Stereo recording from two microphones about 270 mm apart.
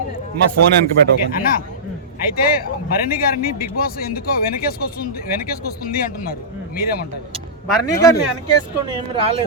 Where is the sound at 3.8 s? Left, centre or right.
Left.